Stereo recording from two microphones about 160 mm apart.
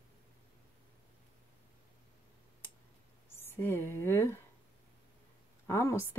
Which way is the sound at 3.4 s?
15° left (ahead or behind).